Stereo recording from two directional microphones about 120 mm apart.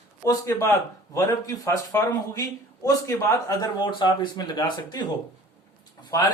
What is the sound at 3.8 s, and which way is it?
Speech, 40° left (ahead or behind).